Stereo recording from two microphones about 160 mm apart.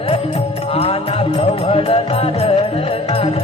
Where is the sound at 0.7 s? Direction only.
35° left (ahead or behind).